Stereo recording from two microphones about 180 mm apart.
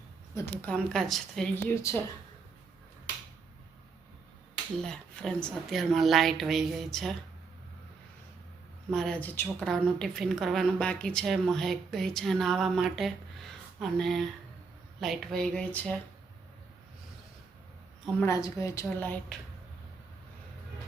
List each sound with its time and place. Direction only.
0.3 s a woman's voice: 10° left (ahead or behind)
4.8 s a woman's voice: 5° left (ahead or behind)
8.9 s a woman's voice: 5° left (ahead or behind)
18.2 s a woman's voice: 20° left (ahead or behind)